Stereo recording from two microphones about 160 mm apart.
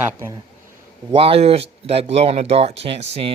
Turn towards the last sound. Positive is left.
turn(degrees=-40)  # may be behind; listen again after turning